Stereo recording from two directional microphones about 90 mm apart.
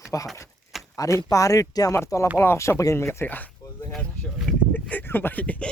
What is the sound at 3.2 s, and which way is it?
Speech, 20° left (ahead or behind).